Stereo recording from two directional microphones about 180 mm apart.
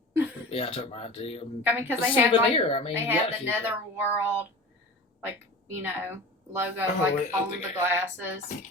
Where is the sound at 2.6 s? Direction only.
30° left (ahead or behind).